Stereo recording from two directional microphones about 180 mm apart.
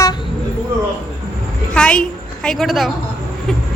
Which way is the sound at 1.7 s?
5° left (ahead or behind).